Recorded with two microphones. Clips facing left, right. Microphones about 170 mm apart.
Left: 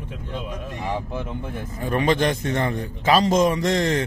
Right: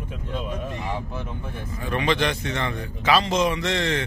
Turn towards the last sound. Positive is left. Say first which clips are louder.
# left 4 dB
turn(degrees=45)  # may be behind; listen again after turning